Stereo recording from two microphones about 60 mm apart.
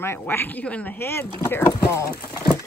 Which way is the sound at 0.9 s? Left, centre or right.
Left.